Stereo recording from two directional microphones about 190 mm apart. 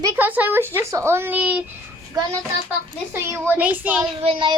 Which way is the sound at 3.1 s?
10° right (ahead or behind).